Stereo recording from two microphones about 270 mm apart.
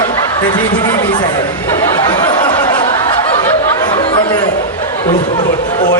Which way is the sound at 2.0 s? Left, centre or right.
Centre.